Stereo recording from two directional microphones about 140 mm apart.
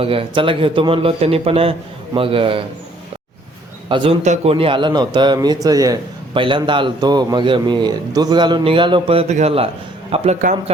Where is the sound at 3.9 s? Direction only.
40° right (ahead or behind).